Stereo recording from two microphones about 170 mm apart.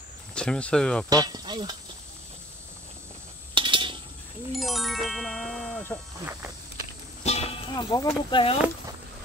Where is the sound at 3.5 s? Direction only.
30° right (ahead or behind).